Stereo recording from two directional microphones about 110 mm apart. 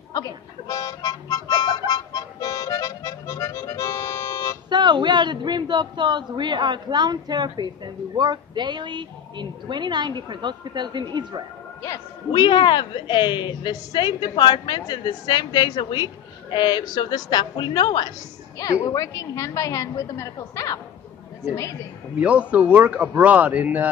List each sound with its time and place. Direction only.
0.1 s music: 35° left (ahead or behind)
4.6 s a man's voice: 45° right (ahead or behind)
12.3 s a woman's voice: 45° left (ahead or behind)
22.2 s speech: 10° right (ahead or behind)